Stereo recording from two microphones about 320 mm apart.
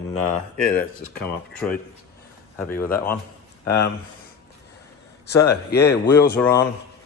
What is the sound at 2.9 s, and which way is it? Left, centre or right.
Speech, centre.